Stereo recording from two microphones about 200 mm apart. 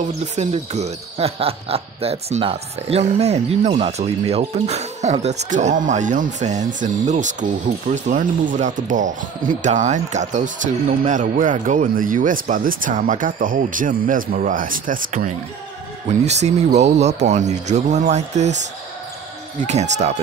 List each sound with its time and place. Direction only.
0.4 s speech: 35° right (ahead or behind)
19.6 s speech: 35° right (ahead or behind)